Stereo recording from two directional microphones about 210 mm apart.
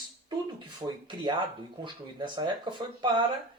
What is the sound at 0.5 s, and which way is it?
Speech, 20° right (ahead or behind).